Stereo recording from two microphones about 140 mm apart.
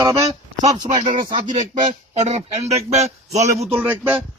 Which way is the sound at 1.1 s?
75° right (ahead or behind).